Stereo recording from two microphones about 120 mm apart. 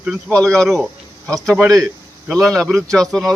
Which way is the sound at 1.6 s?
25° right (ahead or behind).